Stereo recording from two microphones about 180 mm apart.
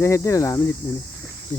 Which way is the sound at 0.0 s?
15° left (ahead or behind).